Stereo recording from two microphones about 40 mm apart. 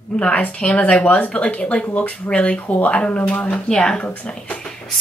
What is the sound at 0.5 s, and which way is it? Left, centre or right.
A woman's voice, left.